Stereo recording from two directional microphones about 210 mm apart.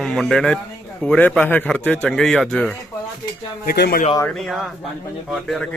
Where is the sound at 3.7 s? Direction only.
45° left (ahead or behind).